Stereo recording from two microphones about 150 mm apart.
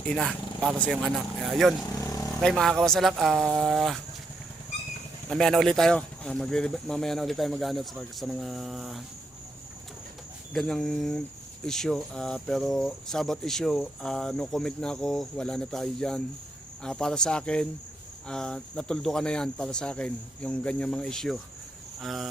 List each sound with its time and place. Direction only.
0.1 s speech: centre (ahead or behind)
1.9 s vehicle: 20° left (ahead or behind)
2.4 s speech: centre (ahead or behind)
5.3 s speech: 5° left (ahead or behind)
10.5 s speech: centre (ahead or behind)